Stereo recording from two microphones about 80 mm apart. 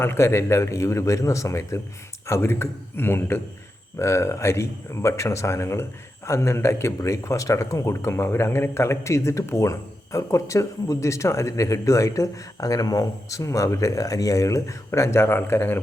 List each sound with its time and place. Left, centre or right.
0.0 s a man's voice: left